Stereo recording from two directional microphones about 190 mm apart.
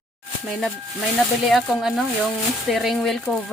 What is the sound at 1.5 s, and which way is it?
Speech, centre (ahead or behind).